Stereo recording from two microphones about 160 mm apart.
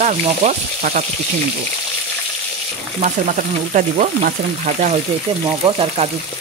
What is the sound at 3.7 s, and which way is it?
Frying, 55° right (ahead or behind).